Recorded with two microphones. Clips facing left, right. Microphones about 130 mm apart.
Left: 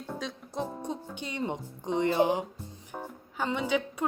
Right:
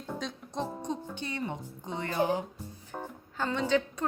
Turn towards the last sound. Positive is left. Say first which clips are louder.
# right 1 dB
turn(degrees=10)  # may be behind; listen again after turning